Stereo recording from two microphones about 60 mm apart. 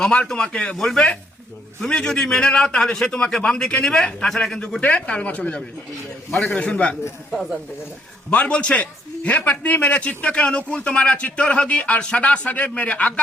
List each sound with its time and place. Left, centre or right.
0.3 s a man's voice: centre
0.8 s a man's voice: centre
4.8 s a man's voice: left
7.3 s speech: centre
8.3 s a man's voice: left